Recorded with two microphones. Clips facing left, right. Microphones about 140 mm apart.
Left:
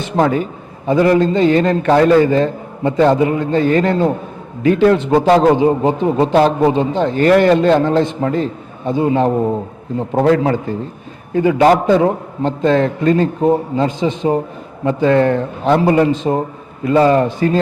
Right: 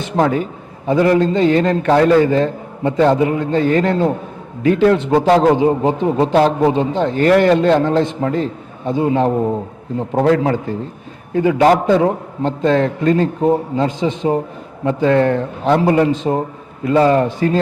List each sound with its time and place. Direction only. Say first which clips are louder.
0.2 s a man's voice: left 1 dB; 20° left (ahead or behind)
9.3 s a man's voice: left 1 dB; 40° left (ahead or behind)
10.2 s a man's voice: left 1 dB; 20° left (ahead or behind)
13.4 s a man's voice: left 1 dB; 25° left (ahead or behind)
13.8 s a man's voice: left 1 dB; 10° left (ahead or behind)